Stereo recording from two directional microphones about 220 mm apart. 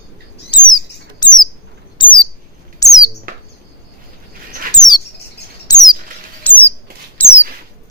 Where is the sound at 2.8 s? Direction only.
15° left (ahead or behind).